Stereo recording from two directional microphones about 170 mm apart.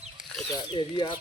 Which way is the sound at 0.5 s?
25° left (ahead or behind).